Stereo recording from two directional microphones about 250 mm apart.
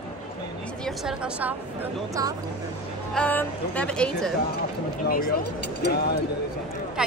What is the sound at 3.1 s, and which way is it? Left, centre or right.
A woman's voice, centre.